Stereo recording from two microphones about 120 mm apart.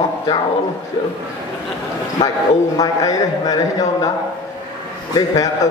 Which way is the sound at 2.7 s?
30° left (ahead or behind).